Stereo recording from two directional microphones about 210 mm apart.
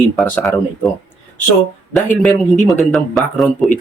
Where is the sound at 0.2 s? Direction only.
5° left (ahead or behind).